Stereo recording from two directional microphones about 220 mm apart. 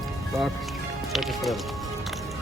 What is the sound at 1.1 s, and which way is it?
Speech, centre (ahead or behind).